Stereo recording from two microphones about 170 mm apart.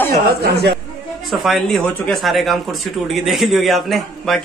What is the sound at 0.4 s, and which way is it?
Speech, 70° right (ahead or behind).